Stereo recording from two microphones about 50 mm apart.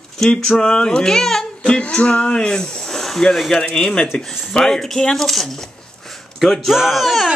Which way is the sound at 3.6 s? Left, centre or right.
Centre.